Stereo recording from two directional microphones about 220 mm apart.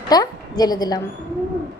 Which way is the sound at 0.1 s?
20° left (ahead or behind).